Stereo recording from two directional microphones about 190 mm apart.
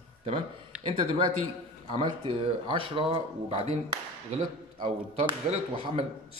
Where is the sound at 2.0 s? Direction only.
25° right (ahead or behind).